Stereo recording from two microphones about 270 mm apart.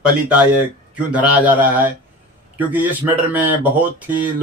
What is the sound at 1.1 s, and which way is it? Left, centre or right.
Speech, centre.